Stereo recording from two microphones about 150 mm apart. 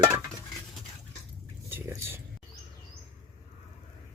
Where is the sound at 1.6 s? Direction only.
15° right (ahead or behind).